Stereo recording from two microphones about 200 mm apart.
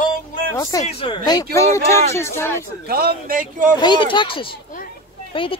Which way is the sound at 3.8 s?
25° left (ahead or behind).